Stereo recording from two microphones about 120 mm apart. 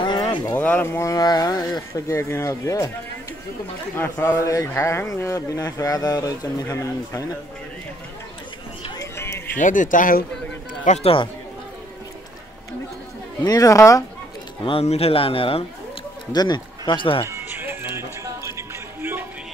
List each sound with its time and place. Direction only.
0.0 s a sound: 40° left (ahead or behind)
0.6 s speech: 15° left (ahead or behind)
3.9 s speech: 20° left (ahead or behind)
8.9 s a sound: 25° left (ahead or behind)
9.6 s speech: 90° left
10.8 s speech: 80° left
13.4 s speech: 30° left (ahead or behind)
14.6 s a man's voice: 50° left (ahead or behind)
16.3 s speech: 35° left (ahead or behind)
17.3 s music: 20° right (ahead or behind)